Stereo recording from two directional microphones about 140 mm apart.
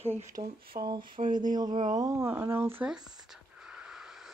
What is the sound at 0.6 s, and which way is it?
Speech, 90° right.